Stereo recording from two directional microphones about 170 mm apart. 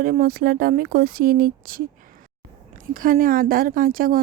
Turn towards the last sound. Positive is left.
turn(degrees=-55)  # may be behind; listen again after turning